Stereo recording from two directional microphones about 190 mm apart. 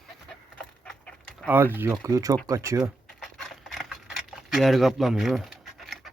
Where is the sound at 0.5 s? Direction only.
5° left (ahead or behind).